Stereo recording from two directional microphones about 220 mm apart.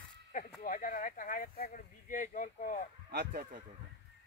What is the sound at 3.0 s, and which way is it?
Speech, 45° right (ahead or behind).